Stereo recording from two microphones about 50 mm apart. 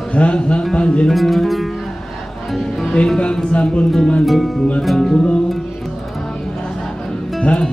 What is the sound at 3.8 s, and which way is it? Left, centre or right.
Music, centre.